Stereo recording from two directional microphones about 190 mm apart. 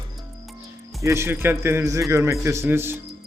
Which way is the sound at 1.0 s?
15° right (ahead or behind).